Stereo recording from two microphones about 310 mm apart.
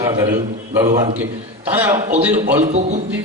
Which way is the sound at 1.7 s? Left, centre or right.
Centre.